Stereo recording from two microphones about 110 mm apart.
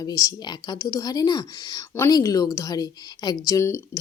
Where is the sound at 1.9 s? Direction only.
20° left (ahead or behind).